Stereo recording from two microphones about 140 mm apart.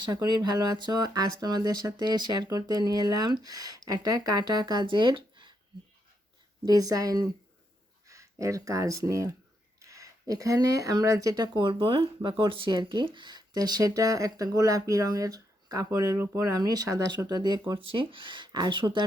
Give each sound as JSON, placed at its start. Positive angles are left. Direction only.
{"t": 0.0, "sound": "speech", "side_deg": -30}
{"t": 6.6, "sound": "speech", "side_deg": -25}